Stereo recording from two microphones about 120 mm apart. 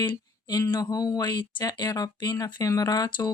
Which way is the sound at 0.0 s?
40° left (ahead or behind).